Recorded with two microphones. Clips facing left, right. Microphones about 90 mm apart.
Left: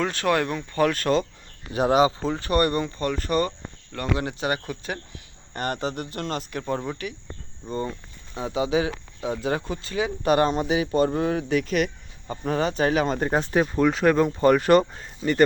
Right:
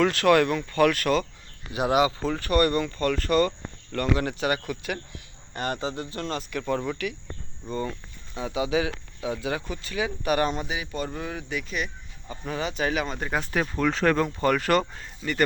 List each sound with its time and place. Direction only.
0.0 s speech: 20° left (ahead or behind)
5.5 s speech: 45° left (ahead or behind)
11.6 s speech: 55° left (ahead or behind)
12.3 s speech: 40° left (ahead or behind)
13.4 s speech: 25° left (ahead or behind)